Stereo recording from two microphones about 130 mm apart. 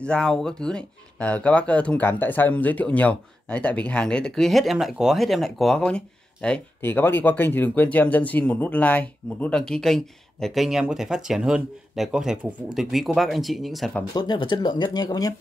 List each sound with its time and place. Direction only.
0.0 s speech: 5° left (ahead or behind)
14.1 s speech: 35° left (ahead or behind)